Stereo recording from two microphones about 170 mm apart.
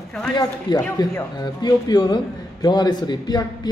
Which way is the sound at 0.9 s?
25° left (ahead or behind).